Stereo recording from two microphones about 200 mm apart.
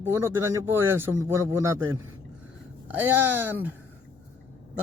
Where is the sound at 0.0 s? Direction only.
10° right (ahead or behind).